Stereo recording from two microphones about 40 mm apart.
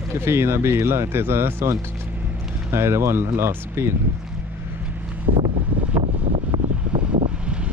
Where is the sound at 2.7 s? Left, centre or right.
Right.